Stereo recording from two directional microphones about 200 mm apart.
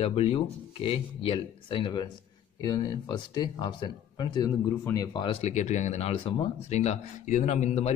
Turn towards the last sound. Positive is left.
turn(degrees=35)  # may be behind; listen again after turning